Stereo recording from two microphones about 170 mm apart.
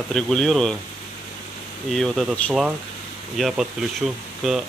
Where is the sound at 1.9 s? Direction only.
Centre (ahead or behind).